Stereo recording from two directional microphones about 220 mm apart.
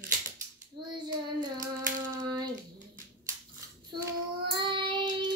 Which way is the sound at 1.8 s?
35° right (ahead or behind).